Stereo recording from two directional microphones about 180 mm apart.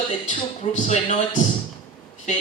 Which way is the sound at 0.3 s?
40° left (ahead or behind).